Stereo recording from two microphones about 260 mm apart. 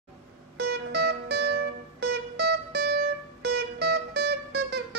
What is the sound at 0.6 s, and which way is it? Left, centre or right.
Music, right.